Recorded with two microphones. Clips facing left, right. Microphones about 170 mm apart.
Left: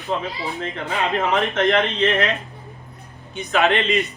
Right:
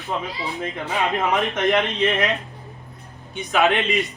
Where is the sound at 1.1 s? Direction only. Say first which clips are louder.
Left 1 dB; 15° right (ahead or behind).